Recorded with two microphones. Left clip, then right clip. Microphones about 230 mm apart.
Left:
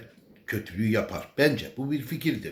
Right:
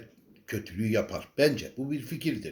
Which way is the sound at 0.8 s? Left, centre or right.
Centre.